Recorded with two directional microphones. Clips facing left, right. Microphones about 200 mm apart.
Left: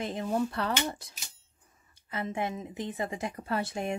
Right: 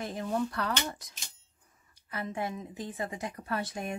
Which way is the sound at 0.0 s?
20° left (ahead or behind).